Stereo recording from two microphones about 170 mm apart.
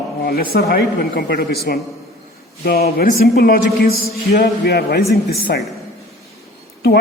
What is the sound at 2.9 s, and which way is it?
Speech, 65° left (ahead or behind).